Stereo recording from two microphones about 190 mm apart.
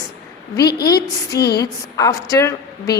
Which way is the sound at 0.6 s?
55° left (ahead or behind).